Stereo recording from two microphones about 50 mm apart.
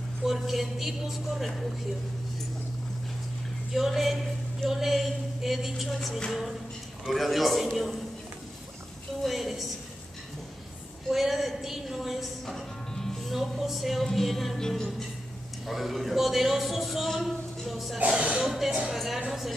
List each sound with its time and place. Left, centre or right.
0.2 s a man's voice: centre
3.7 s a man's voice: centre
7.1 s a man's voice: centre
9.2 s a sound: centre
11.1 s music: centre
13.3 s a man's voice: centre
17.9 s speech: right
18.4 s a man's voice: centre